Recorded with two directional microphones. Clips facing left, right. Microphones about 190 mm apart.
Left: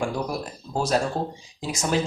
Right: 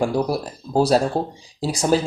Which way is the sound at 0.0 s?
35° right (ahead or behind).